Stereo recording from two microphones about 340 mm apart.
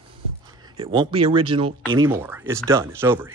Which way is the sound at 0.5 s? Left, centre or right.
Centre.